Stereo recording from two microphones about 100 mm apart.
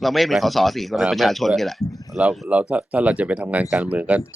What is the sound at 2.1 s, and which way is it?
Speech, 10° right (ahead or behind).